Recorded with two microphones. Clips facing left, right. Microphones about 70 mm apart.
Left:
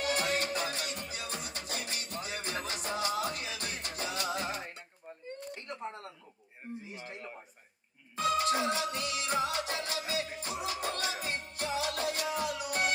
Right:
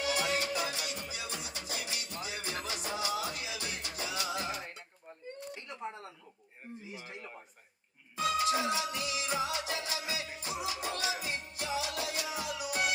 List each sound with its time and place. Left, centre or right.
0.0 s music: left
5.5 s a sound: left
8.2 s music: left